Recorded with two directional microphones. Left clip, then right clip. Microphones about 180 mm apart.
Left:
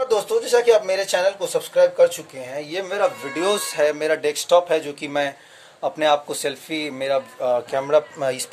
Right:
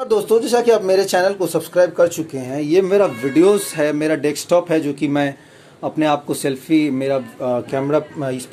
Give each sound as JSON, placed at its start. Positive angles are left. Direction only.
{"t": 0.1, "sound": "speech", "side_deg": -15}
{"t": 3.3, "sound": "a man's voice", "side_deg": -5}
{"t": 8.2, "sound": "speech", "side_deg": 20}